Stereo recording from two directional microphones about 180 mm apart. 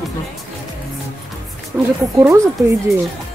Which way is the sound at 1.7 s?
5° right (ahead or behind).